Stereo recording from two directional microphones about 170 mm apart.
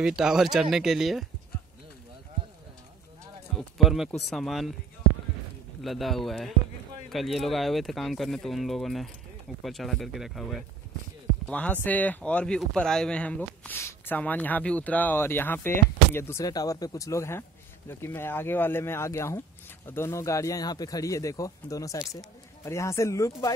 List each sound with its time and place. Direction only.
0.0 s speech: 5° right (ahead or behind)
3.5 s speech: centre (ahead or behind)
5.8 s a man's voice: centre (ahead or behind); by 23.5 s 20° left (ahead or behind)